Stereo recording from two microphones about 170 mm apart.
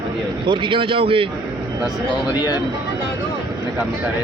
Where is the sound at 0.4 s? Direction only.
30° right (ahead or behind).